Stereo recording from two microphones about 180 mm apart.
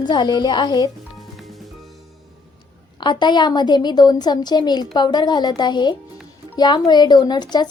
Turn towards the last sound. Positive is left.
turn(degrees=25)  # may be behind; listen again after turning